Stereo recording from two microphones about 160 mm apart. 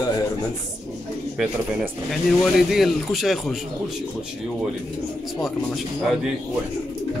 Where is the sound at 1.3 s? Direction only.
Centre (ahead or behind).